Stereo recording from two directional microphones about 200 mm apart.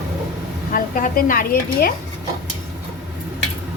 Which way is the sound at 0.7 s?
45° left (ahead or behind).